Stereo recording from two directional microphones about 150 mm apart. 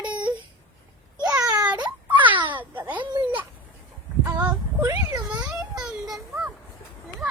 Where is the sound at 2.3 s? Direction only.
35° right (ahead or behind).